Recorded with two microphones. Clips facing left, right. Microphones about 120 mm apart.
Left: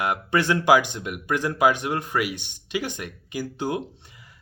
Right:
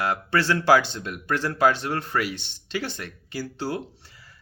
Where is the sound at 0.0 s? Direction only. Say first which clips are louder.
Left 1 dB; 20° left (ahead or behind).